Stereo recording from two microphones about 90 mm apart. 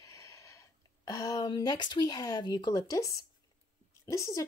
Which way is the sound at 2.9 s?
35° left (ahead or behind).